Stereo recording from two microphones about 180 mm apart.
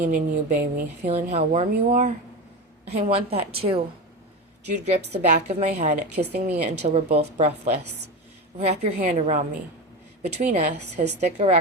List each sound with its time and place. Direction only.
0.0 s speech: 45° right (ahead or behind)
1.0 s a woman's voice: 35° right (ahead or behind)
5.2 s a woman's voice: 40° right (ahead or behind)